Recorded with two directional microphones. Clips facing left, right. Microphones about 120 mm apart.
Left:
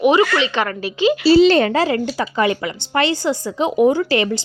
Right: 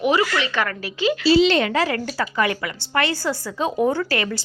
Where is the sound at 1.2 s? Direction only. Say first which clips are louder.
Left 5 dB; 40° left (ahead or behind); by 4.4 s 25° left (ahead or behind).